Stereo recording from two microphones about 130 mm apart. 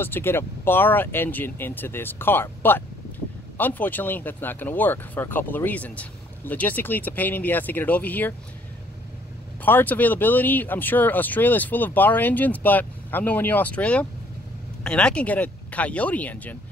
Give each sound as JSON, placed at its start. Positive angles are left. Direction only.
{"t": 0.0, "sound": "speech", "side_deg": 15}
{"t": 9.7, "sound": "speech", "side_deg": 15}